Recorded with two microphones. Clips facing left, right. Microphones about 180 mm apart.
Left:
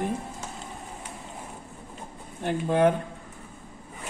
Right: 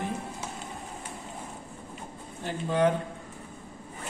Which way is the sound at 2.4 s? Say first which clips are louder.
Left 3 dB; 55° left (ahead or behind).